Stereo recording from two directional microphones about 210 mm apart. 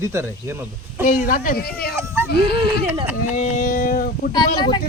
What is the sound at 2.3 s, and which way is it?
Speech, 50° left (ahead or behind).